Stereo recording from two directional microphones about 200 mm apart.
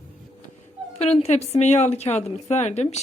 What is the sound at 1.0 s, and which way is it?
A woman's voice, 30° left (ahead or behind).